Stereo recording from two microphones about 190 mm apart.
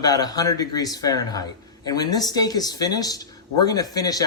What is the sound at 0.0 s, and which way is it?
A man's voice, 20° left (ahead or behind).